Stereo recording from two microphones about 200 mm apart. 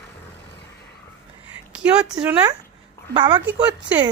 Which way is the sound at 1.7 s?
5° right (ahead or behind).